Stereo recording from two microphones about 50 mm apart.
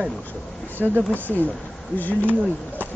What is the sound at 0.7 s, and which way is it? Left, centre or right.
Speech, right.